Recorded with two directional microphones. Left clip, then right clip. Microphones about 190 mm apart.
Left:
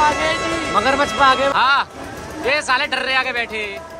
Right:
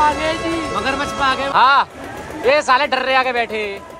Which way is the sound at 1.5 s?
10° left (ahead or behind).